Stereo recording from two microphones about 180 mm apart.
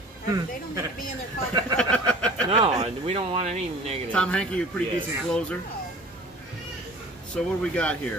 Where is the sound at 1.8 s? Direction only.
5° left (ahead or behind).